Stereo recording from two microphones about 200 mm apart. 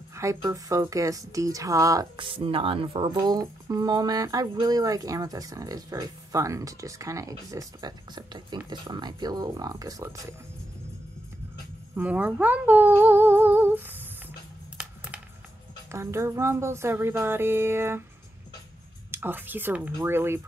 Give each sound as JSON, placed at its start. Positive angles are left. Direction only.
{"t": 0.1, "sound": "speech", "side_deg": -15}
{"t": 11.9, "sound": "speech", "side_deg": -10}
{"t": 15.9, "sound": "speech", "side_deg": -15}
{"t": 19.0, "sound": "speech", "side_deg": -10}